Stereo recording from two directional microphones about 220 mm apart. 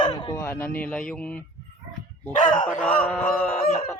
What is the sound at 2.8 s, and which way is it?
Speech, 5° left (ahead or behind).